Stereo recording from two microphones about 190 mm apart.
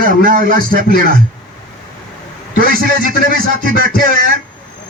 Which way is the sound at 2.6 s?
50° right (ahead or behind).